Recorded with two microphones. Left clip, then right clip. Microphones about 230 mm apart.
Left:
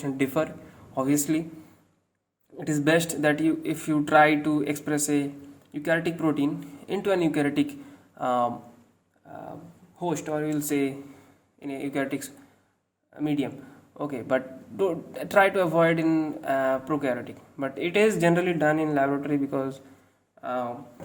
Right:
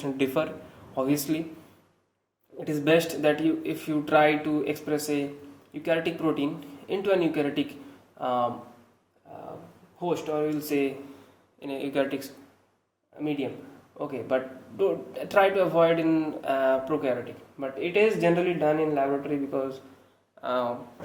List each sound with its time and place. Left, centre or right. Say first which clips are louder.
0.0 s a man's voice: even; left
2.6 s a man's voice: even; left
10.0 s a man's voice: right 1 dB; left
11.6 s speech: right 2 dB; centre
13.1 s a man's voice: left 2 dB; left
20.4 s speech: right 2 dB; centre